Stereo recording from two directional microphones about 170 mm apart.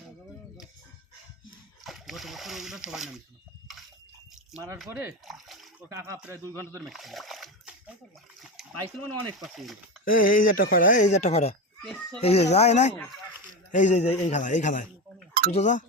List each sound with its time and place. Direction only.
1.8 s speech: centre (ahead or behind)
4.9 s a man's voice: 15° right (ahead or behind)
5.2 s splash: centre (ahead or behind)
5.9 s a man's voice: 20° right (ahead or behind)
6.7 s a sound: centre (ahead or behind)
9.4 s speech: centre (ahead or behind)
10.0 s speech: 55° left (ahead or behind)
11.8 s speech: 5° left (ahead or behind)
12.2 s speech: 40° left (ahead or behind)